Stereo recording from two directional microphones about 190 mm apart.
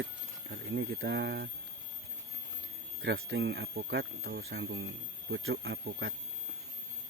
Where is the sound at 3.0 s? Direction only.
85° right; by 6.2 s 55° right (ahead or behind).